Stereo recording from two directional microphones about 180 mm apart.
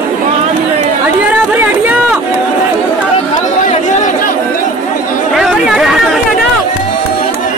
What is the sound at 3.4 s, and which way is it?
Chatter, 40° left (ahead or behind).